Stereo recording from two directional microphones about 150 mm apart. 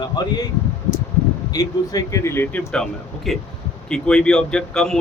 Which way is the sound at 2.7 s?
5° left (ahead or behind).